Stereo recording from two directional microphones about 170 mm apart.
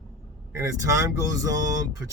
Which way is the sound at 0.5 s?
15° right (ahead or behind).